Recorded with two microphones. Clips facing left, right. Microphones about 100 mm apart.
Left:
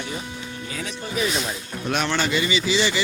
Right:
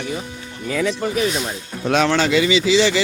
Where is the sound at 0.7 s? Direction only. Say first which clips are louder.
Right 11 dB; 85° right.